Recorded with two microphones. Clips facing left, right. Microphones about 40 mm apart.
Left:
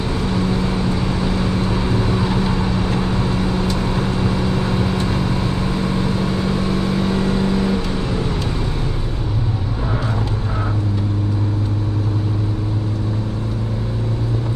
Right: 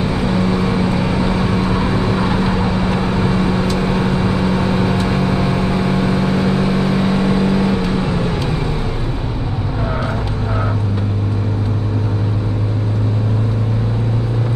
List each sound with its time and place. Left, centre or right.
0.0 s vehicle: centre